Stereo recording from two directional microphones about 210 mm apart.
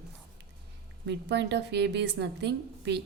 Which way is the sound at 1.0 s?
55° right (ahead or behind).